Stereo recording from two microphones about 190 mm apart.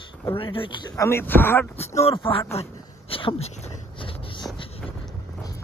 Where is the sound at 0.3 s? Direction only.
30° left (ahead or behind); by 1.7 s 10° left (ahead or behind).